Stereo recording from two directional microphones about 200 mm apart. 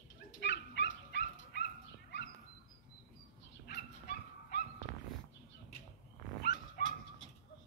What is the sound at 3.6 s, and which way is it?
Dog, 50° left (ahead or behind).